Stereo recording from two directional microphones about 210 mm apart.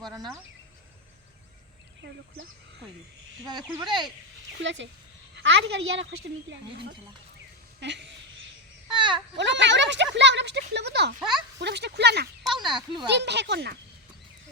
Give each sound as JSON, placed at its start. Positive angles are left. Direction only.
{"t": 3.8, "sound": "speech", "side_deg": -20}
{"t": 4.6, "sound": "speech", "side_deg": -60}
{"t": 7.8, "sound": "speech", "side_deg": -55}
{"t": 8.9, "sound": "baby cry", "side_deg": -20}
{"t": 9.3, "sound": "speech", "side_deg": -55}
{"t": 11.2, "sound": "speech", "side_deg": 0}
{"t": 11.6, "sound": "speech", "side_deg": -55}
{"t": 12.5, "sound": "speech", "side_deg": -20}
{"t": 13.1, "sound": "speech", "side_deg": -55}